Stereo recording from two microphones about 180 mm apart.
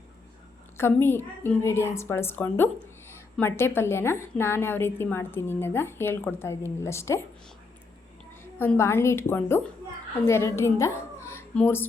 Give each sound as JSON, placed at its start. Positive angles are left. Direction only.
{"t": 1.0, "sound": "a woman's voice", "side_deg": 10}
{"t": 8.5, "sound": "a woman's voice", "side_deg": 10}